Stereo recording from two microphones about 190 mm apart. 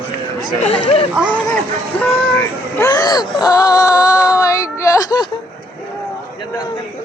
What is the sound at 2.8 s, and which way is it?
Speech, 15° left (ahead or behind).